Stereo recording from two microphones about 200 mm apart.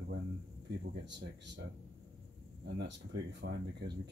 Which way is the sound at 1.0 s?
60° right (ahead or behind).